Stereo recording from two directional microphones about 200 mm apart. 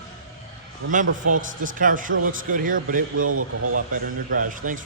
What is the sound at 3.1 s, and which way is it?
Speech, 90° right.